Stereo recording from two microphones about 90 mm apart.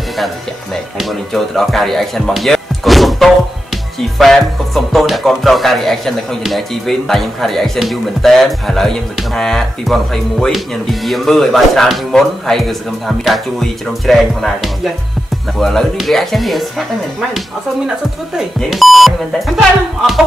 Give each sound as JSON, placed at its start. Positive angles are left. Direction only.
{"t": 0.9, "sound": "music", "side_deg": 0}
{"t": 18.7, "sound": "music", "side_deg": 0}